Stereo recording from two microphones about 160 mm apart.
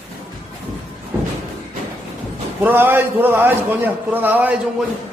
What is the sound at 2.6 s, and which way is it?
A man's voice, 15° right (ahead or behind).